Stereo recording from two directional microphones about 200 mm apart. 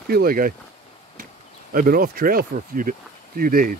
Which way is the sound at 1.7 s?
45° right (ahead or behind).